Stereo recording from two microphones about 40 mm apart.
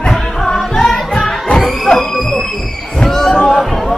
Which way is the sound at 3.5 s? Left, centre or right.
Centre.